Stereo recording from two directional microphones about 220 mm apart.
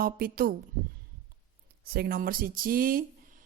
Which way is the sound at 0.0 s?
40° right (ahead or behind).